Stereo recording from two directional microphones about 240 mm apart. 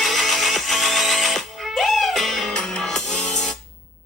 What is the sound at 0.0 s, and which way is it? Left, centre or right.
Music, centre.